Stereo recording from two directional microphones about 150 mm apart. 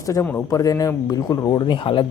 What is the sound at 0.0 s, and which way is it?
Speech, 20° left (ahead or behind).